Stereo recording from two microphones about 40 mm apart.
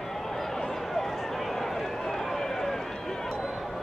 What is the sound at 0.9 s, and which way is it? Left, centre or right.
Run, centre.